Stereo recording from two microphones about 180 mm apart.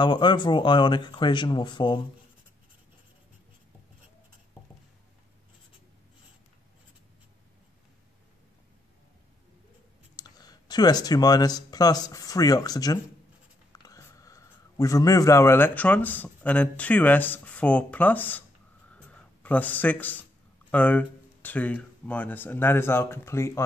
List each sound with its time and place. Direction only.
0.0 s speech: 25° left (ahead or behind)
10.1 s speech: 20° left (ahead or behind)
18.9 s a sound: 5° left (ahead or behind)
20.7 s speech: 10° left (ahead or behind)